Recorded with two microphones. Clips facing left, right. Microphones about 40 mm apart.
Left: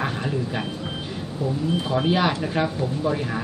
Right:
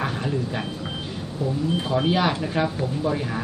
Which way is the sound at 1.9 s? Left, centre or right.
Centre.